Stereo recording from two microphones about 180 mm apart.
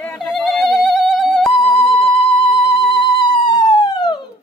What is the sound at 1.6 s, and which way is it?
Music, 30° left (ahead or behind).